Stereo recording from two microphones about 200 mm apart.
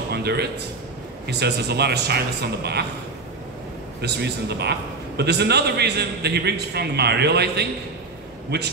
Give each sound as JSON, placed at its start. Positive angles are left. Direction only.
{"t": 0.1, "sound": "a sound", "side_deg": -55}
{"t": 1.2, "sound": "a man's voice", "side_deg": -55}
{"t": 4.0, "sound": "a man's voice", "side_deg": -55}